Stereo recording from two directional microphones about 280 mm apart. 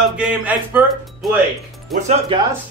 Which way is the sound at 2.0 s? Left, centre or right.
Centre.